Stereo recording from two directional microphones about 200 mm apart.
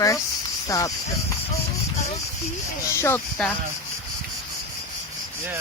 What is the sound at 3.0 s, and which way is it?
Speech, 10° left (ahead or behind).